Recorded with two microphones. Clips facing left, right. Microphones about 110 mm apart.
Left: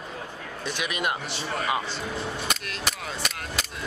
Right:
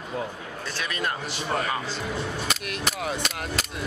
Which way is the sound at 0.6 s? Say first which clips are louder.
Left 1 dB; 15° left (ahead or behind).